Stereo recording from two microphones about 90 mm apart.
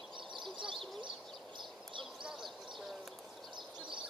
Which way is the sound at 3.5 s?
65° right (ahead or behind).